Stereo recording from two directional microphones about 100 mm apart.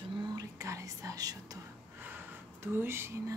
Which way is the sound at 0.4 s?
35° right (ahead or behind).